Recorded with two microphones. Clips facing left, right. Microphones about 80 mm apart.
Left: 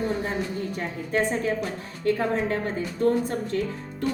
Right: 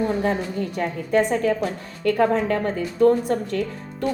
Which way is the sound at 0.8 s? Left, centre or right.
Right.